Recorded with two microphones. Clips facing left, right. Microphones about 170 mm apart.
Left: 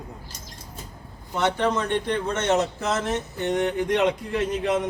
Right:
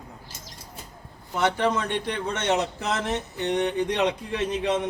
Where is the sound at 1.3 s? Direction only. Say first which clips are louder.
Left 1 dB; 10° right (ahead or behind).